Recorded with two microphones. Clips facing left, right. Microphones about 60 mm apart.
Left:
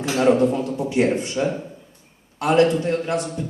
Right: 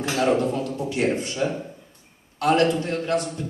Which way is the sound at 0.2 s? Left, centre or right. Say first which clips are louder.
Left 5 dB; left.